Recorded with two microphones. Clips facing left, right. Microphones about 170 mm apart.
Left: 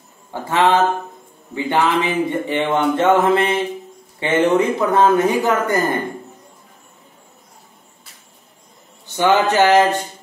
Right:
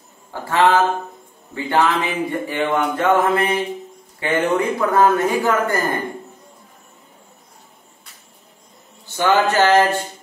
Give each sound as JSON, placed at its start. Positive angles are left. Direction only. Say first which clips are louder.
{"t": 0.3, "sound": "a man's voice", "louder": "even", "side_deg": 20}
{"t": 9.0, "sound": "speech", "louder": "left 1 dB", "side_deg": 15}